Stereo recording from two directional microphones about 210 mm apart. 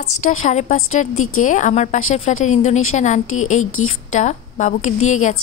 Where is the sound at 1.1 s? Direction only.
90° left.